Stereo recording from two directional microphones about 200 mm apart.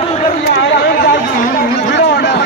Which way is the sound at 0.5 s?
55° left (ahead or behind).